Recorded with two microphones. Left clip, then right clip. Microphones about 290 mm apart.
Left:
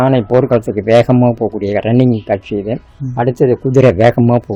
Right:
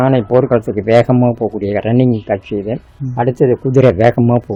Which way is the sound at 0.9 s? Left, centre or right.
Left.